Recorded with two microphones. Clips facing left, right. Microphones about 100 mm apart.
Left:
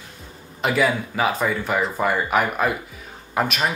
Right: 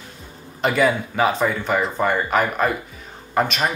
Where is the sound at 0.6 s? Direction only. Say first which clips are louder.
Right 2 dB; centre (ahead or behind).